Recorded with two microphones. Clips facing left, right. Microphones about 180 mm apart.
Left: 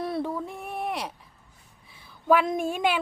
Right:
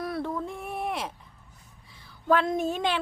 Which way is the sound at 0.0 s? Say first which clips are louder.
Left 2 dB; 25° left (ahead or behind).